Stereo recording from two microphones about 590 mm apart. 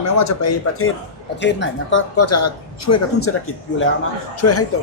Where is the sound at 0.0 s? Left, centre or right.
Left.